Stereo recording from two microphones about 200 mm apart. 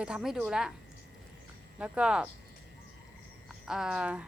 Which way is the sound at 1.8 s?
5° right (ahead or behind).